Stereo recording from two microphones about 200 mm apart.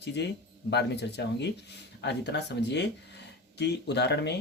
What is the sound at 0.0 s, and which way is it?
Speech, 55° left (ahead or behind).